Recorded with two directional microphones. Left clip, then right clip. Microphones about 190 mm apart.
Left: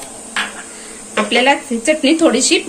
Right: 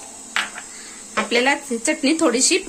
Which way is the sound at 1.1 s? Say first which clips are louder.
Left 5 dB; 55° right (ahead or behind).